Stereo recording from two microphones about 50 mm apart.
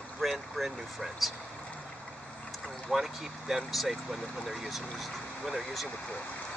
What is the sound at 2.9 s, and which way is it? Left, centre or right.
Speech, centre.